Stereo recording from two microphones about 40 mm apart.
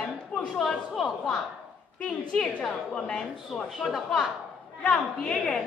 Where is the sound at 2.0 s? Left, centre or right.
Centre.